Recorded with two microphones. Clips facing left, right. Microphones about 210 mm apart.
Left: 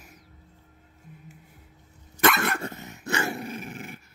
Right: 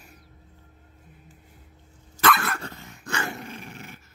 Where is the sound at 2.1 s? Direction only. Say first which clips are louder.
Left 1 dB; 20° left (ahead or behind).